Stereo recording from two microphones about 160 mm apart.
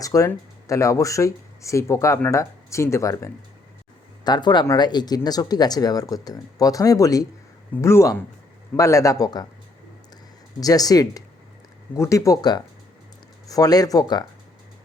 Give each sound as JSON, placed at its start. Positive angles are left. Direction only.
{"t": 0.0, "sound": "speech", "side_deg": 20}
{"t": 10.6, "sound": "speech", "side_deg": 20}